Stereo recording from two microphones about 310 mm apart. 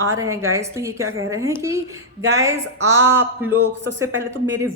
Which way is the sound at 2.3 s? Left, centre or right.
Centre.